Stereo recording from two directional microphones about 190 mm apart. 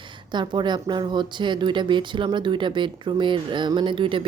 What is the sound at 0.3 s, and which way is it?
Speech, 25° right (ahead or behind).